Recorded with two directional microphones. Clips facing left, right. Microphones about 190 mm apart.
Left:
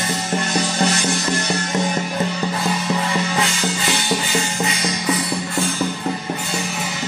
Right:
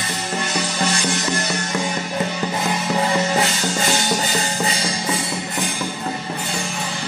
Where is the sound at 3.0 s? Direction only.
40° right (ahead or behind); by 5.7 s 25° right (ahead or behind).